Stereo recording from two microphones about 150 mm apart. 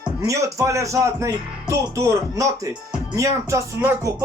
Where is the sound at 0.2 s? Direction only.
20° right (ahead or behind).